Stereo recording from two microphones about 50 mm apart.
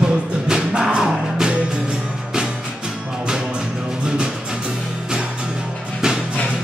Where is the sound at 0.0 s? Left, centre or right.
Centre.